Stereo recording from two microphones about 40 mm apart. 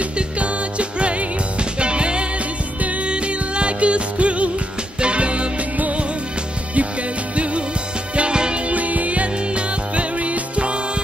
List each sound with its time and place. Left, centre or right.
0.0 s music: right
8.2 s music: right
8.7 s music: right